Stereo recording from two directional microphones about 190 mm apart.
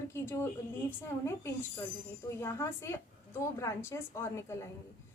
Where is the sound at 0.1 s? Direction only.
15° left (ahead or behind).